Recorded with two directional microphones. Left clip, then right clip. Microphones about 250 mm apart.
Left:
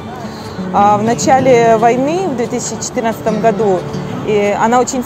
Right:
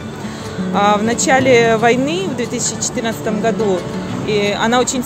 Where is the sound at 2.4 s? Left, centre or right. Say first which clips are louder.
Left 2 dB; centre.